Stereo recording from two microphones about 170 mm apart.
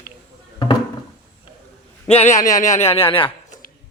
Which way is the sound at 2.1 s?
35° left (ahead or behind).